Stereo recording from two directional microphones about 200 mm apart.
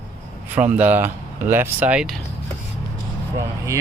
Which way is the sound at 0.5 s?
10° right (ahead or behind).